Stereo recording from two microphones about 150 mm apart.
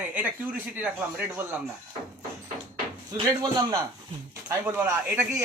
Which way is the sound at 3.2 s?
25° right (ahead or behind).